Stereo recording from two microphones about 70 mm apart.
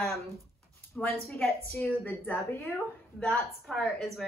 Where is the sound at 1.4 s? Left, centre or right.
Left.